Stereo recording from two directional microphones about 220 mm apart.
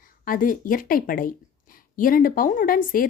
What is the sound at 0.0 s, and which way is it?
Speech, 40° left (ahead or behind).